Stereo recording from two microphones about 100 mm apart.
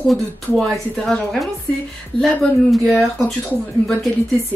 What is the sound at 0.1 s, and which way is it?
A woman's voice, 5° left (ahead or behind).